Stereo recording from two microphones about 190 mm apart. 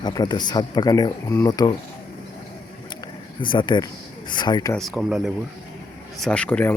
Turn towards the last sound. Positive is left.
turn(degrees=5)  # may be behind; listen again after turning